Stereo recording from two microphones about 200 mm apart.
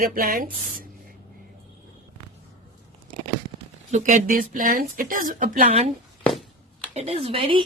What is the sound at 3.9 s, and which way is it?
Speech, 40° right (ahead or behind).